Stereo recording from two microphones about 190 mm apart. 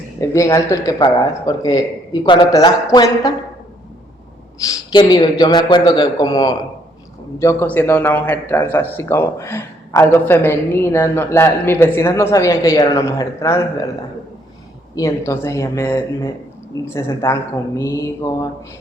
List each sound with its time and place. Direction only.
0.2 s speech: 15° left (ahead or behind)
4.7 s speech: 20° left (ahead or behind)
14.9 s speech: 15° left (ahead or behind)